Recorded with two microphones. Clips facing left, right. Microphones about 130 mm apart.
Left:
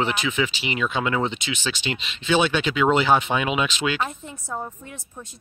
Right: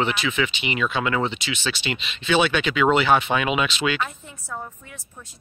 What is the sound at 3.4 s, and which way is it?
Speech, 5° right (ahead or behind).